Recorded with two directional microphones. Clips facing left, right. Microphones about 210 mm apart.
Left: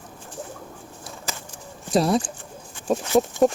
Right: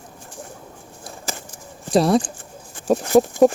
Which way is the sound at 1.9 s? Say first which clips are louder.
Right 3 dB; centre (ahead or behind).